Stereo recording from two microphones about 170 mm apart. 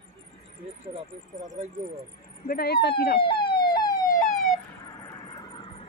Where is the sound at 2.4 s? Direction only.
65° left (ahead or behind).